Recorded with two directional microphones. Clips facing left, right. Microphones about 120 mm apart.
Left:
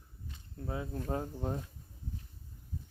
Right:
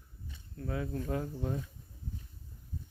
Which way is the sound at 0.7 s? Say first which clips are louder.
Right 1 dB; 25° left (ahead or behind).